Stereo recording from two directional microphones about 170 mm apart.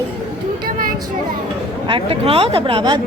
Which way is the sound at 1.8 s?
30° right (ahead or behind).